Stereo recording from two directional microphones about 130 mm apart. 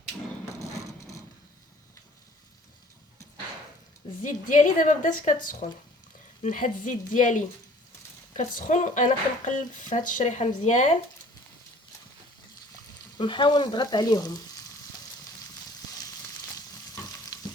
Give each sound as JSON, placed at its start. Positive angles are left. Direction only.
{"t": 0.6, "sound": "a sound", "side_deg": 25}
{"t": 4.2, "sound": "a woman's voice", "side_deg": 75}
{"t": 8.4, "sound": "speech", "side_deg": 70}
{"t": 13.1, "sound": "frying", "side_deg": 40}
{"t": 16.6, "sound": "stir", "side_deg": 30}